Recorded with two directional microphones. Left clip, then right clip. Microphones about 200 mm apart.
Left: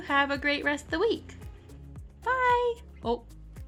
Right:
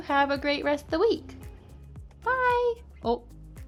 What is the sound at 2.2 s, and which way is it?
Child singing, 10° right (ahead or behind).